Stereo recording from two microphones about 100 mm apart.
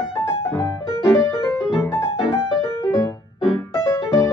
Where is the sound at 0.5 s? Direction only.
25° left (ahead or behind).